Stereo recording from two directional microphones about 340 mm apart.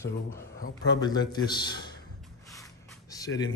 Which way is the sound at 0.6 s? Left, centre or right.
Left.